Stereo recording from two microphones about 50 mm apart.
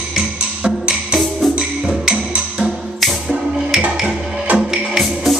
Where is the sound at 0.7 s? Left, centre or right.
Centre.